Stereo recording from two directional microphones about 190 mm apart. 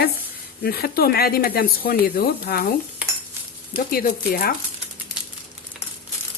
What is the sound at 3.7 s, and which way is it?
Speech, 50° left (ahead or behind).